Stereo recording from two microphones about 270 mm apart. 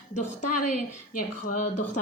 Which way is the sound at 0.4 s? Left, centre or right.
Left.